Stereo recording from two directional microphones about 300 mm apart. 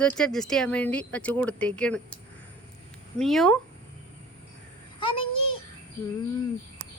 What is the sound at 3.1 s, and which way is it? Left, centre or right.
Speech, centre.